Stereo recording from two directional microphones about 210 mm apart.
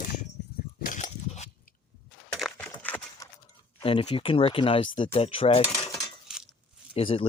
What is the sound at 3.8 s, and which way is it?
Speech, 25° left (ahead or behind).